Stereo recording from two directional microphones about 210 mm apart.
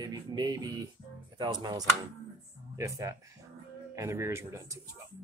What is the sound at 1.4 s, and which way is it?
Speech, 20° right (ahead or behind).